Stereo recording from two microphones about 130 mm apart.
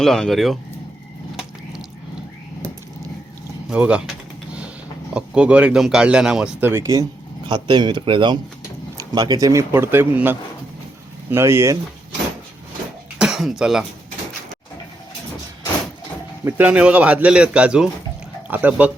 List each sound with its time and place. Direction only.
0.0 s speech: 5° left (ahead or behind)
3.7 s speech: 10° right (ahead or behind)
5.1 s speech: 10° right (ahead or behind)
7.4 s speech: 35° right (ahead or behind)
13.1 s speech: 5° right (ahead or behind)
16.4 s speech: 15° right (ahead or behind)